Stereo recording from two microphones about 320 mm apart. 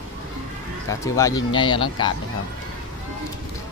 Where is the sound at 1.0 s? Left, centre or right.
Centre.